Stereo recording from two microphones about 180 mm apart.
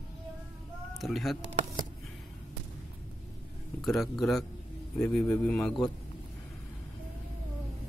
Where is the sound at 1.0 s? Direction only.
Centre (ahead or behind).